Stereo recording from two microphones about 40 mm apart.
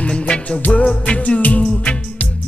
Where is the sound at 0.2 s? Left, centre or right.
Left.